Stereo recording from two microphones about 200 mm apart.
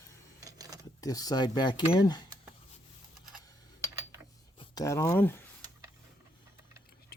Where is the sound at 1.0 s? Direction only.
20° left (ahead or behind).